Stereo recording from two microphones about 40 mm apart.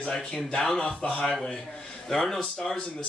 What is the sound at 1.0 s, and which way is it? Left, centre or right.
Speech, left.